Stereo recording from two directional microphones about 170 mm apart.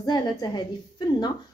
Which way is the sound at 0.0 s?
25° left (ahead or behind).